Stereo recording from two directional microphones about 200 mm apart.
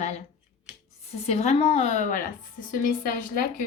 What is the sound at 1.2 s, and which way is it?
A woman's voice, 30° left (ahead or behind).